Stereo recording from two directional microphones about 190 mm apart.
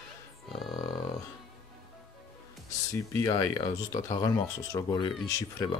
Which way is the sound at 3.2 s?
20° left (ahead or behind).